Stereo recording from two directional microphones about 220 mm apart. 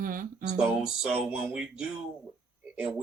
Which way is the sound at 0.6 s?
5° right (ahead or behind).